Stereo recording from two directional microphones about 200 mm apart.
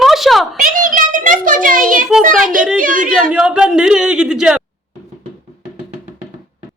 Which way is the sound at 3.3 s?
5° right (ahead or behind).